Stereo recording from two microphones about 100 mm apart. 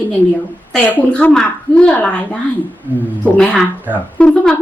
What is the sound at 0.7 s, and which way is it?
A woman's voice, 10° left (ahead or behind).